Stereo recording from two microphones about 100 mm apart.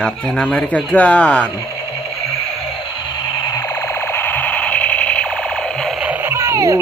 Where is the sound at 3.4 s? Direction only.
35° left (ahead or behind); by 6.0 s 5° left (ahead or behind).